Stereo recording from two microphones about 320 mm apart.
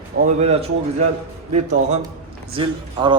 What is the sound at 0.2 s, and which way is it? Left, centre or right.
Speech, right.